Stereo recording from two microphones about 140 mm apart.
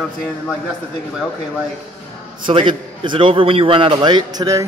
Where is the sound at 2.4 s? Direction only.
35° right (ahead or behind).